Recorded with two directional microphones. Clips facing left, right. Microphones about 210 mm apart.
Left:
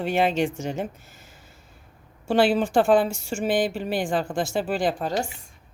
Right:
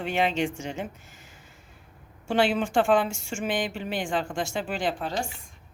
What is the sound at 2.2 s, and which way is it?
A woman's voice, 35° left (ahead or behind).